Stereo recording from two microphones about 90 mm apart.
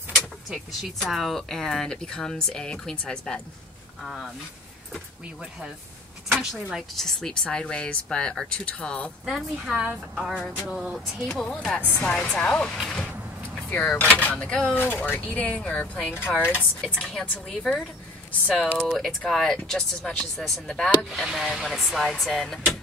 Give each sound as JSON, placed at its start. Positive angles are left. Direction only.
{"t": 0.1, "sound": "speech", "side_deg": 0}
{"t": 6.7, "sound": "speech", "side_deg": 5}
{"t": 9.2, "sound": "speech", "side_deg": 0}
{"t": 12.6, "sound": "speech", "side_deg": -5}
{"t": 13.7, "sound": "speech", "side_deg": 15}
{"t": 14.8, "sound": "speech", "side_deg": 20}
{"t": 16.2, "sound": "speech", "side_deg": 25}
{"t": 17.0, "sound": "speech", "side_deg": 5}